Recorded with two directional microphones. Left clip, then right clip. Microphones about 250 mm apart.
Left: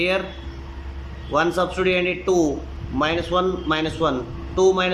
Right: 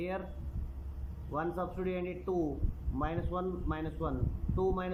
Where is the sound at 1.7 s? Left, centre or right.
Centre.